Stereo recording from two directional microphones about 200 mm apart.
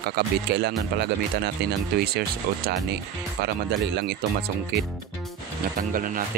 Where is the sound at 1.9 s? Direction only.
50° right (ahead or behind).